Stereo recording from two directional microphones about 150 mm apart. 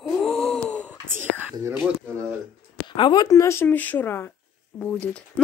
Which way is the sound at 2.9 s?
30° left (ahead or behind).